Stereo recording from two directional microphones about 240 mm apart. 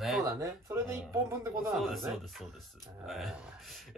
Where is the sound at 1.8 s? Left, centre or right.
Centre.